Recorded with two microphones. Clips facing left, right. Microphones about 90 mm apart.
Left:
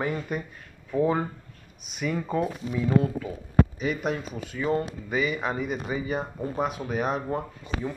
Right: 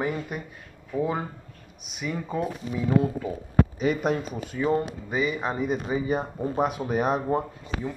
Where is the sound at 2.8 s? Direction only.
20° right (ahead or behind).